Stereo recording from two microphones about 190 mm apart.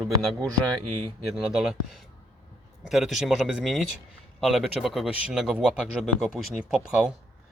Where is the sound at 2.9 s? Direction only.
Centre (ahead or behind).